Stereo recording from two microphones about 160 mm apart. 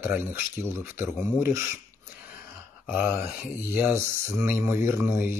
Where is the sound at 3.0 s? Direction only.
15° right (ahead or behind).